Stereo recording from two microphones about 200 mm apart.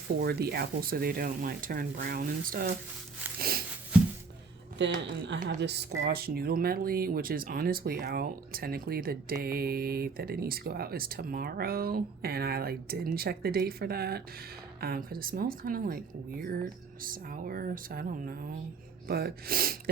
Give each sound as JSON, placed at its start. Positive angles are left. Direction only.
{"t": 0.2, "sound": "speech", "side_deg": -50}
{"t": 3.3, "sound": "a sound", "side_deg": -50}
{"t": 3.9, "sound": "music", "side_deg": -5}
{"t": 4.8, "sound": "speech", "side_deg": -60}